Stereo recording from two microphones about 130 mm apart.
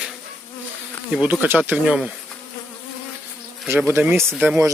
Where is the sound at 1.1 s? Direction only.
10° right (ahead or behind).